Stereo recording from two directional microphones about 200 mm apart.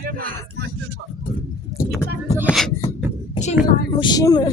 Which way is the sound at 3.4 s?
25° left (ahead or behind).